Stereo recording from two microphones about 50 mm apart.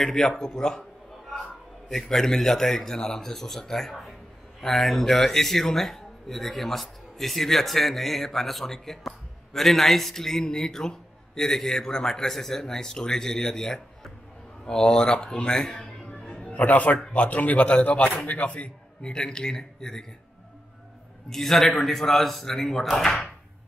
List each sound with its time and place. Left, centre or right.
0.0 s speech: centre
1.9 s speech: centre
16.2 s music: centre
16.5 s a man's voice: left; by 20.1 s centre
21.3 s speech: centre